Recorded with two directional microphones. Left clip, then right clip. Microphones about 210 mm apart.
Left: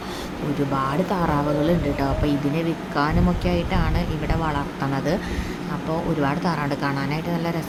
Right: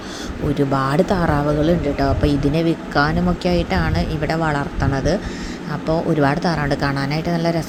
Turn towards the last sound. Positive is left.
turn(degrees=-20)  # may be behind; listen again after turning